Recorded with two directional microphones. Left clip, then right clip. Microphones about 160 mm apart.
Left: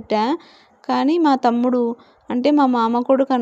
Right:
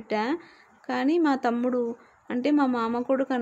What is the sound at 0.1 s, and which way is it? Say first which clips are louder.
A woman's voice: left 8 dB; 40° left (ahead or behind).